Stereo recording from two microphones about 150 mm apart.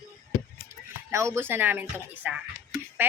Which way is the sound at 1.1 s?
20° right (ahead or behind).